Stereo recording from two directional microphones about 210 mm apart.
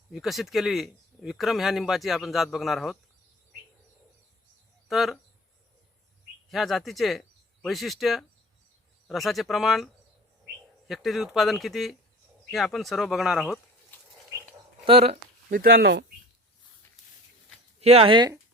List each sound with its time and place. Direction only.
0.1 s speech: centre (ahead or behind)
4.9 s speech: centre (ahead or behind)
6.5 s speech: centre (ahead or behind)
13.9 s a sound: 10° left (ahead or behind)
14.8 s speech: 30° right (ahead or behind)
15.4 s speech: 45° right (ahead or behind)
17.7 s speech: 30° right (ahead or behind)